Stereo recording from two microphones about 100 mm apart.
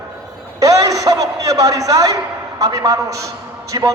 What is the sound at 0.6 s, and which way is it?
A man's voice, 35° right (ahead or behind).